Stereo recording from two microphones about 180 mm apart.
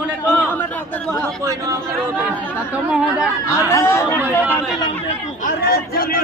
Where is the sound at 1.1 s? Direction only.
5° left (ahead or behind).